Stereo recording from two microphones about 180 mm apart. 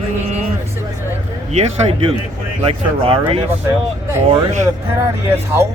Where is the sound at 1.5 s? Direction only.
40° right (ahead or behind).